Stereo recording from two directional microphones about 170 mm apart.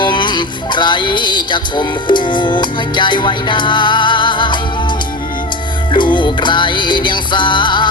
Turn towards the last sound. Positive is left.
turn(degrees=25)  # may be behind; listen again after turning